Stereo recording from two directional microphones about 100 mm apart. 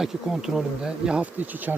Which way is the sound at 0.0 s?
5° right (ahead or behind).